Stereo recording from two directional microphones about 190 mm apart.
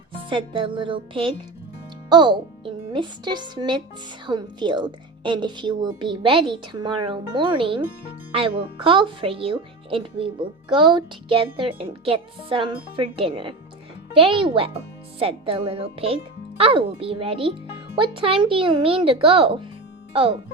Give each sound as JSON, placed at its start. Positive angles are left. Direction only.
{"t": 0.3, "sound": "a woman's voice", "side_deg": -25}